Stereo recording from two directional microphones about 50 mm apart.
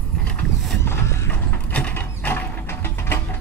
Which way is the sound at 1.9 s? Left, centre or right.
Left.